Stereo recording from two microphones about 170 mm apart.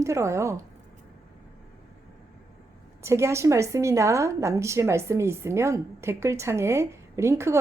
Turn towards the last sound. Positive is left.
turn(degrees=-15)  # may be behind; listen again after turning